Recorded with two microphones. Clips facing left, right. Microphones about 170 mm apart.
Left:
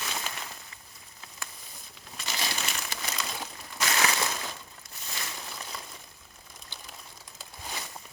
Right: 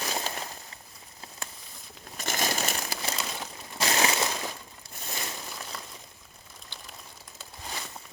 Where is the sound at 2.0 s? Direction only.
50° right (ahead or behind).